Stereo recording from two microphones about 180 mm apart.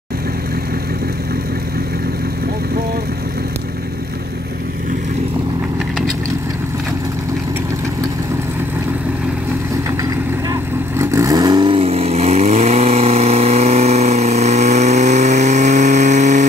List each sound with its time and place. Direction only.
10.5 s vehicle: 15° right (ahead or behind); by 16.4 s 40° right (ahead or behind)